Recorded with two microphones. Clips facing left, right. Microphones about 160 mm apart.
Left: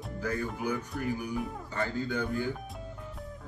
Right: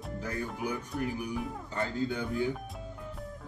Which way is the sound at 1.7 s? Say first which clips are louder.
Even; 20° right (ahead or behind).